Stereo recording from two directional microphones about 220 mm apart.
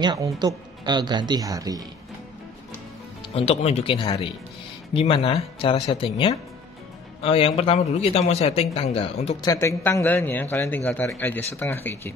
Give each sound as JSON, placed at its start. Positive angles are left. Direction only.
{"t": 0.0, "sound": "speech", "side_deg": -20}
{"t": 3.3, "sound": "a man's voice", "side_deg": 30}
{"t": 9.5, "sound": "a man's voice", "side_deg": 15}